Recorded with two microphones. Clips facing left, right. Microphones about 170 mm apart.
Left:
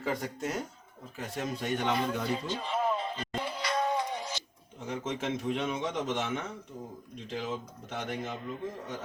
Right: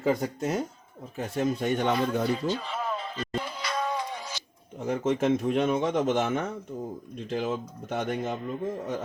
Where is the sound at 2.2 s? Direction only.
35° right (ahead or behind).